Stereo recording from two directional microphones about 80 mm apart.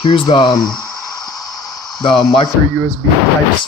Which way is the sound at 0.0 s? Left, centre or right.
Left.